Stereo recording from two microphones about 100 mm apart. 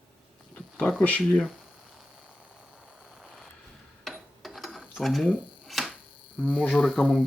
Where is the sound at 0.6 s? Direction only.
15° left (ahead or behind).